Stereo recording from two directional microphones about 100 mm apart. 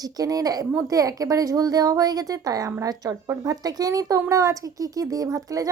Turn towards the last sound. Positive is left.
turn(degrees=-35)  # may be behind; listen again after turning